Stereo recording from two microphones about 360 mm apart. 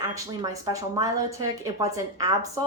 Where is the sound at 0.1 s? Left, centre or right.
Centre.